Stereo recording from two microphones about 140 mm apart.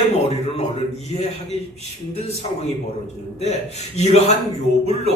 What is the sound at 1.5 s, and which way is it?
Speech, 50° left (ahead or behind).